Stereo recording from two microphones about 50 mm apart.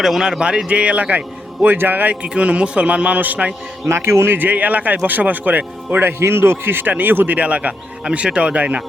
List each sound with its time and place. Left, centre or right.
0.0 s a man's voice: centre
0.3 s a man's voice: centre
1.6 s speech: right
2.2 s speech: right
3.8 s a man's voice: right
4.4 s speech: right
7.3 s speech: right